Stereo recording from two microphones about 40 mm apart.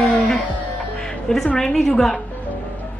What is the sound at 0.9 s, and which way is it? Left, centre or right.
Music, centre.